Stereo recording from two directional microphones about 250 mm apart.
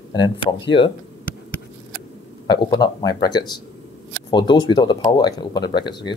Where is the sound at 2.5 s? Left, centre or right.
Centre.